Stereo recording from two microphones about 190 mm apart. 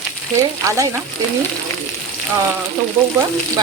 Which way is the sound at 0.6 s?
15° right (ahead or behind).